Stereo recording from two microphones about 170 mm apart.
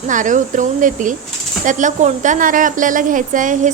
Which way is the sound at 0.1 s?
50° right (ahead or behind).